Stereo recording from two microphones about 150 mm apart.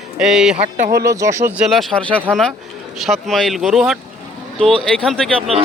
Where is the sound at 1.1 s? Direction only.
20° right (ahead or behind).